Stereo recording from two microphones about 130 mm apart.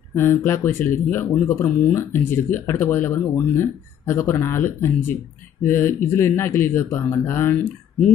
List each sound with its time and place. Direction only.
0.1 s speech: 15° left (ahead or behind)